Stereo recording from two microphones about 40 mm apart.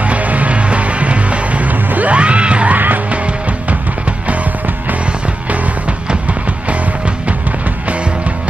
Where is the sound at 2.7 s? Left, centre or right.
Right.